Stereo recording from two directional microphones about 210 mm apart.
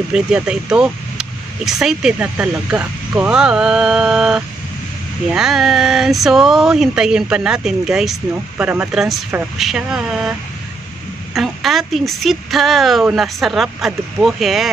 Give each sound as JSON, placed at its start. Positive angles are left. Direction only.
{"t": 0.1, "sound": "speech", "side_deg": -5}
{"t": 11.3, "sound": "speech", "side_deg": 0}